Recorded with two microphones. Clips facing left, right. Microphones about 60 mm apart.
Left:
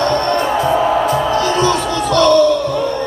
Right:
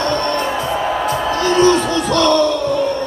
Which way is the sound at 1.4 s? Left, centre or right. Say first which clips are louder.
Right 2 dB; right.